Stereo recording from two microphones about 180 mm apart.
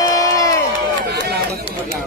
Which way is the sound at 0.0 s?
20° left (ahead or behind).